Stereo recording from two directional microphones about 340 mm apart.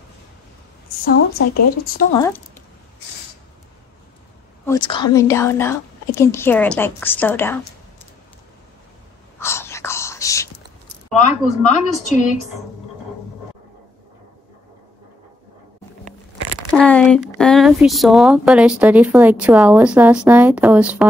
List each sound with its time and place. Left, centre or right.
1.0 s speech: left
4.6 s speech: centre
9.4 s whispering: centre
11.1 s speech: left
16.7 s speech: centre